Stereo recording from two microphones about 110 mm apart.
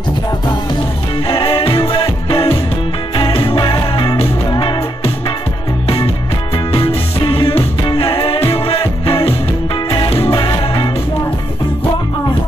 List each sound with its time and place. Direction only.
1.2 s music: 55° left (ahead or behind)
6.7 s music: 60° left (ahead or behind)
10.3 s music: 50° left (ahead or behind)